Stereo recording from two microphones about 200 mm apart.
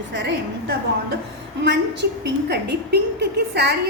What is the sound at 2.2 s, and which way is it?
A woman's voice, 55° right (ahead or behind).